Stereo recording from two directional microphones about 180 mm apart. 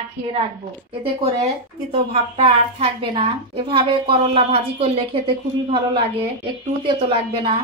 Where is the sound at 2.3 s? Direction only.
30° right (ahead or behind).